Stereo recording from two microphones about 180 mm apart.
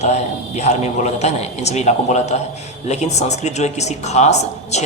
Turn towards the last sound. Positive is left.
turn(degrees=40)  # may be behind; listen again after turning